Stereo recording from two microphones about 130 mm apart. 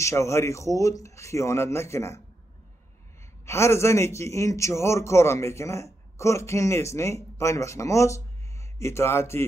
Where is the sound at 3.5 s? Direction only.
20° left (ahead or behind).